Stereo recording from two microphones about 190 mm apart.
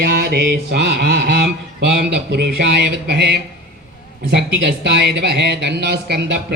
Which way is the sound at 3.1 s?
65° right (ahead or behind).